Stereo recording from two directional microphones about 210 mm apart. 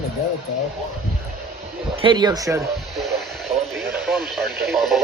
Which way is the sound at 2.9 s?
Centre (ahead or behind).